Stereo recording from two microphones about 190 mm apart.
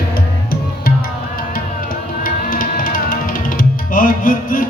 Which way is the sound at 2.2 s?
45° left (ahead or behind).